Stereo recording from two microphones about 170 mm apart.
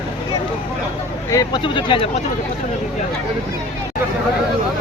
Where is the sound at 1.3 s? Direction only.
25° left (ahead or behind).